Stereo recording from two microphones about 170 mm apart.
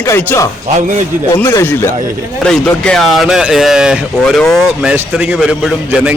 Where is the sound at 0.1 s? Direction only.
15° left (ahead or behind).